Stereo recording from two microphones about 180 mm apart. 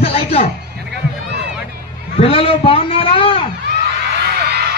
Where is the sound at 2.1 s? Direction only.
35° left (ahead or behind).